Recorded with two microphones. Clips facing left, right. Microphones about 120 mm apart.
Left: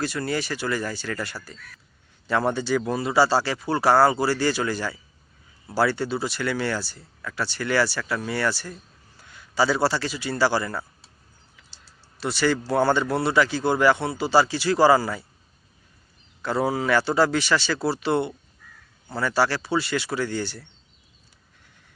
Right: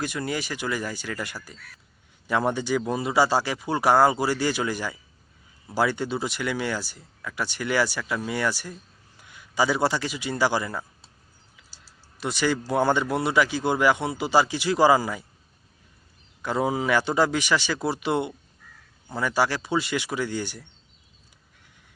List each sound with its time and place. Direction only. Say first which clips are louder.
0.0 s speech: left 2 dB; 15° right (ahead or behind)
12.2 s speech: left 2 dB; 15° right (ahead or behind)
16.4 s speech: left 1 dB; 15° right (ahead or behind)